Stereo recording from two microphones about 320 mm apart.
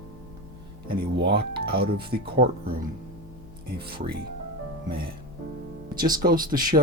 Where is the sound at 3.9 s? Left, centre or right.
Right.